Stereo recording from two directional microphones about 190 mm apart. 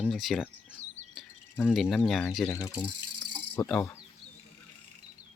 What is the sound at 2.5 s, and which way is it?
Speech, 20° left (ahead or behind).